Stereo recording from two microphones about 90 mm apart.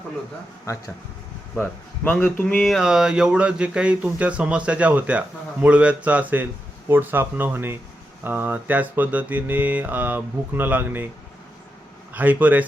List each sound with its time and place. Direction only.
0.7 s speech: 35° left (ahead or behind)
2.2 s speech: 15° left (ahead or behind)
2.6 s speech: 5° right (ahead or behind)
5.6 s mantra: 15° right (ahead or behind)
12.1 s speech: 20° right (ahead or behind)